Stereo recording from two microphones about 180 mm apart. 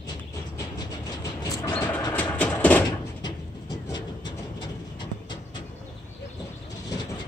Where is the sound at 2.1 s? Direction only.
10° left (ahead or behind).